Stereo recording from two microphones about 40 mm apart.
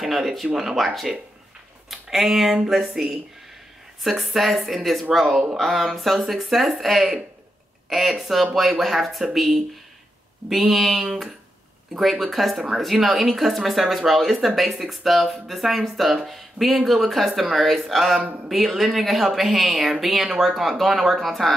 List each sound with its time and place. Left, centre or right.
0.0 s speech: centre
8.1 s speech: centre
18.2 s speech: right
18.5 s speech: centre